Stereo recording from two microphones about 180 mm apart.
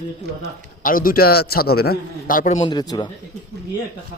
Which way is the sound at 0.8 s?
50° left (ahead or behind).